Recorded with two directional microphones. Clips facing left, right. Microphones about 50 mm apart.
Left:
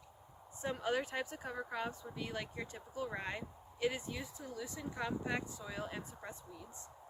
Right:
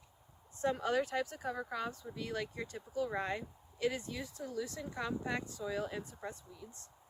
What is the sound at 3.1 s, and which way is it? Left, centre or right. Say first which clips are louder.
Speech: right 4 dB; centre.